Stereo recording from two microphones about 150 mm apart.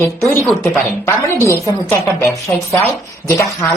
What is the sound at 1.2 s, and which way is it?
A woman's voice, 20° left (ahead or behind).